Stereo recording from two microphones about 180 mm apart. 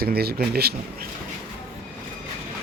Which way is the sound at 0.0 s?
60° right (ahead or behind).